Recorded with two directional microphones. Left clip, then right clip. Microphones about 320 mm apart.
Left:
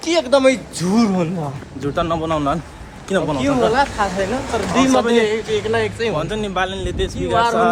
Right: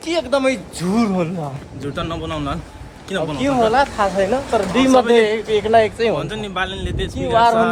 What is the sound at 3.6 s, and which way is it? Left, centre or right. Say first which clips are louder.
Speech: right 2 dB; right.